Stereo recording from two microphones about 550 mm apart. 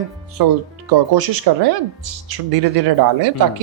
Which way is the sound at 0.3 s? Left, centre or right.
Right.